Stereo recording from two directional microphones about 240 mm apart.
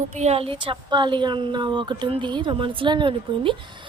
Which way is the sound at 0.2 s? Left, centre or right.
Right.